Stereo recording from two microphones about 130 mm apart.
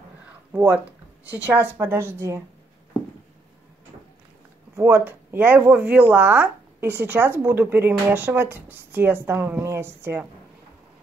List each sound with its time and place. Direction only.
0.5 s a woman's voice: 10° right (ahead or behind)
4.7 s speech: 15° right (ahead or behind)